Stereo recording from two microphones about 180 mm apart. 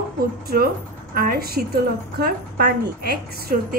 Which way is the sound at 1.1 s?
55° right (ahead or behind).